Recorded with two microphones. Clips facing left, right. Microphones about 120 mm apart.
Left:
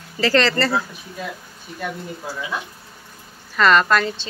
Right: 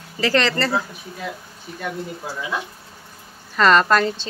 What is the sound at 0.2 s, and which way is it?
Speech, 15° right (ahead or behind).